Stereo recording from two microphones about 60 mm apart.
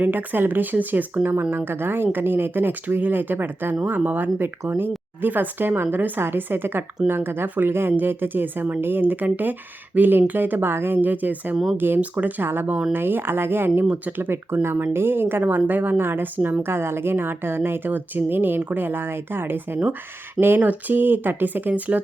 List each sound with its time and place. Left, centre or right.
0.0 s speech: right
11.5 s speech: centre
11.9 s speech: right
12.4 s speech: right
13.8 s speech: right
14.2 s speech: right